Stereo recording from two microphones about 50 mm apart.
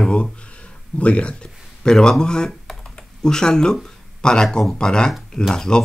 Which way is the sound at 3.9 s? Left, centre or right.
Centre.